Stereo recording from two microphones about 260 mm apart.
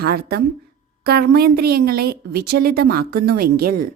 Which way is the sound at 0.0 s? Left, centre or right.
Right.